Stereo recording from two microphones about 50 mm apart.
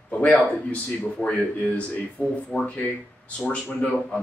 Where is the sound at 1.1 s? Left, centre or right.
Left.